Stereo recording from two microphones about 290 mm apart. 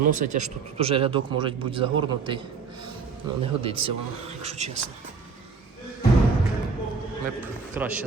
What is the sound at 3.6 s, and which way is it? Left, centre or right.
Speech, centre.